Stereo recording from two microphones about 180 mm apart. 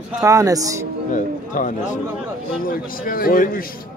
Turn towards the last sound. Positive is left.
turn(degrees=50)  # may be behind; listen again after turning